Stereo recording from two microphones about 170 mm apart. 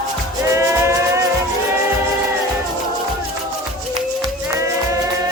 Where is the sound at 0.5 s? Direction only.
15° right (ahead or behind).